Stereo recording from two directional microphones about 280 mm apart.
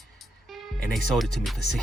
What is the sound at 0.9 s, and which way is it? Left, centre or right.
Speech, centre.